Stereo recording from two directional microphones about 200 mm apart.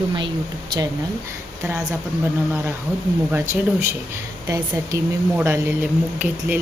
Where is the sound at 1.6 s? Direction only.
15° right (ahead or behind).